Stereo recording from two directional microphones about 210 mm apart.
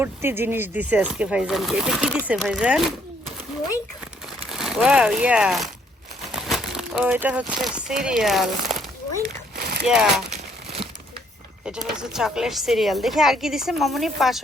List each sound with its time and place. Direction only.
0.0 s speech: 10° right (ahead or behind)
4.4 s speech: centre (ahead or behind)
9.8 s speech: 5° right (ahead or behind)
10.2 s crumpling: 30° right (ahead or behind)
11.6 s speech: 5° right (ahead or behind)